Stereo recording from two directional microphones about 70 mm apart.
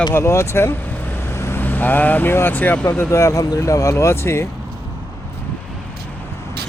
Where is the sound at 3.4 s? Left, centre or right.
Left.